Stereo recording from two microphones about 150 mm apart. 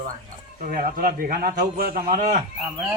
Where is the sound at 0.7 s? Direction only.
70° right (ahead or behind).